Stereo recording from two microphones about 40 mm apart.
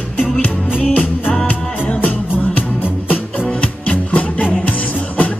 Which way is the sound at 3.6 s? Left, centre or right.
Left.